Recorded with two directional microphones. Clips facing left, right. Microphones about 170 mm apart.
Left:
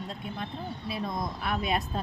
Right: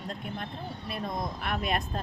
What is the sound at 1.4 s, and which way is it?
Speech, centre (ahead or behind).